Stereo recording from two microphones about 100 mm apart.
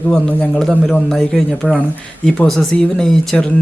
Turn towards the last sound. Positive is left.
turn(degrees=10)  # may be behind; listen again after turning